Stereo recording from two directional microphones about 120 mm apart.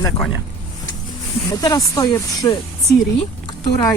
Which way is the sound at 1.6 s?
30° left (ahead or behind).